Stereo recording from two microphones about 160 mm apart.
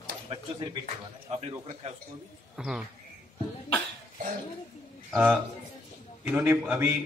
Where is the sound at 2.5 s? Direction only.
Centre (ahead or behind).